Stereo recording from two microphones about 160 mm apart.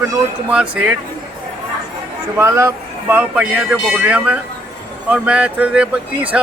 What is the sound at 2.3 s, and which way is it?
A man's voice, 15° right (ahead or behind).